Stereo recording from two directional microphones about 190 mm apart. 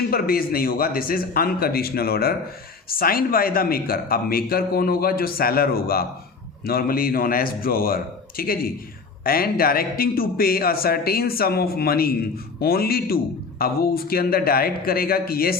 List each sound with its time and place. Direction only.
0.1 s a man's voice: 50° left (ahead or behind)